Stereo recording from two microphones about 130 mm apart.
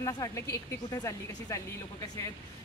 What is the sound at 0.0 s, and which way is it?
A woman's voice, 25° left (ahead or behind).